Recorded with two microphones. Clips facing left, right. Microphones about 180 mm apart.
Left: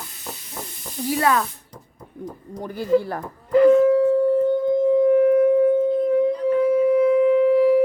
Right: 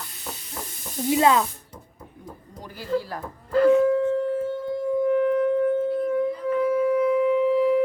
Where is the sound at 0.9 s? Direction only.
20° right (ahead or behind).